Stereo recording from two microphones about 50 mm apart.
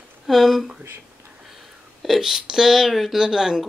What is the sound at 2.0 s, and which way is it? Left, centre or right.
A woman's voice, centre.